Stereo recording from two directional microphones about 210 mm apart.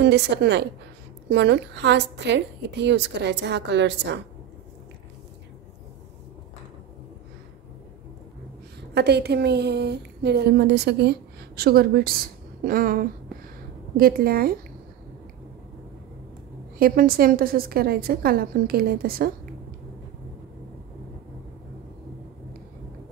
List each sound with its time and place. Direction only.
0.0 s a woman's voice: 55° right (ahead or behind)
8.9 s a woman's voice: 50° right (ahead or behind)
16.7 s a woman's voice: 45° right (ahead or behind)